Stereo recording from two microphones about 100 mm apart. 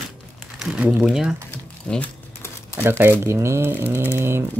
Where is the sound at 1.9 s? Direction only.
10° left (ahead or behind).